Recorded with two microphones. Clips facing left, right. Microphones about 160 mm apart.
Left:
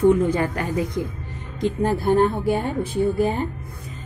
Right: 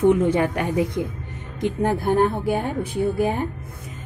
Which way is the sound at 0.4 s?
15° right (ahead or behind).